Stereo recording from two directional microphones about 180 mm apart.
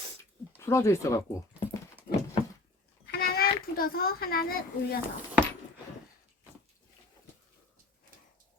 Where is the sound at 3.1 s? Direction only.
55° left (ahead or behind).